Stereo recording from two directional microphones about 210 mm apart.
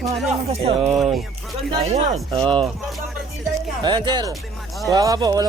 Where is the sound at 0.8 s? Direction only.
5° right (ahead or behind).